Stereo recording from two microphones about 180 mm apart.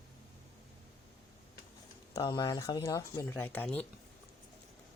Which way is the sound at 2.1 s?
20° left (ahead or behind).